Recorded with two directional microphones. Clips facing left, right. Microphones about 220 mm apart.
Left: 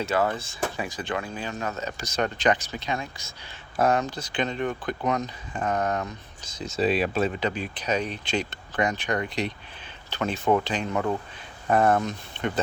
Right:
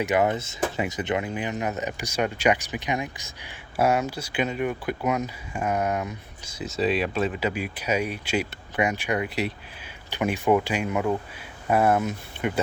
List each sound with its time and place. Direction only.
0.0 s speech: 15° right (ahead or behind)